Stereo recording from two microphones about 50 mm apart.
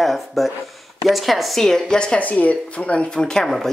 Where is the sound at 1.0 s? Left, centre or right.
Centre.